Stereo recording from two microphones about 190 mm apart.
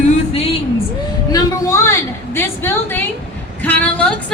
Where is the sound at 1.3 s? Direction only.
20° left (ahead or behind).